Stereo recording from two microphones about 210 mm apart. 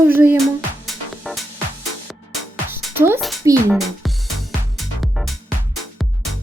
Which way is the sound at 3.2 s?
Centre (ahead or behind).